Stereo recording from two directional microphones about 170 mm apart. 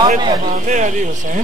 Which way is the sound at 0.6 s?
45° right (ahead or behind).